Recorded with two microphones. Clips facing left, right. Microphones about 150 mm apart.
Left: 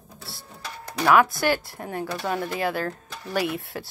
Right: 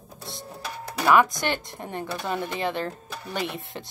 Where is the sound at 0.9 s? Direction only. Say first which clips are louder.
Left 1 dB; centre (ahead or behind).